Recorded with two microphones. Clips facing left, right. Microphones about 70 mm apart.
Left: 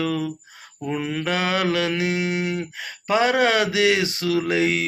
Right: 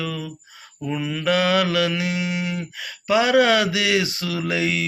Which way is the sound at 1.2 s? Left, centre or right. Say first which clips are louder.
Right 5 dB; left.